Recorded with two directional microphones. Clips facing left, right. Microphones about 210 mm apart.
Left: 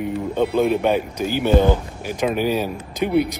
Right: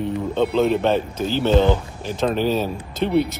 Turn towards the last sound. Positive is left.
turn(degrees=10)  # may be behind; listen again after turning